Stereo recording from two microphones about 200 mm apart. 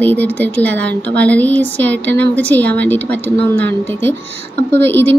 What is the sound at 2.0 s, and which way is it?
Speech, 60° right (ahead or behind).